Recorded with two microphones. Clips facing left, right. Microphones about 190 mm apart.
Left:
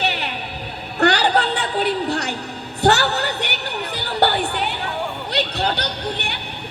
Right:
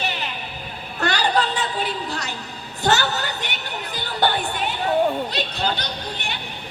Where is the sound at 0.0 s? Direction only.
65° left (ahead or behind).